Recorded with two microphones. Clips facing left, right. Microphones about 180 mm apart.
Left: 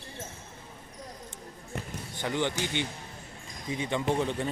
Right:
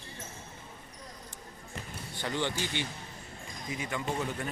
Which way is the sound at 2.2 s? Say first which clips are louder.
Left 3 dB; 15° left (ahead or behind).